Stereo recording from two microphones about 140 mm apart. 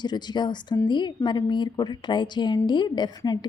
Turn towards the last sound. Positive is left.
turn(degrees=30)  # may be behind; listen again after turning